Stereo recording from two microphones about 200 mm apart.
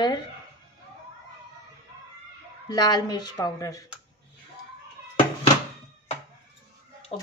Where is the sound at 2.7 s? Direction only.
20° left (ahead or behind).